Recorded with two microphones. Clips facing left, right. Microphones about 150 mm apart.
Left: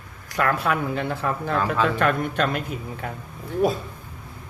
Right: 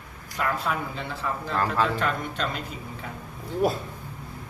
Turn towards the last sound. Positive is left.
turn(degrees=0)  # may be behind; listen again after turning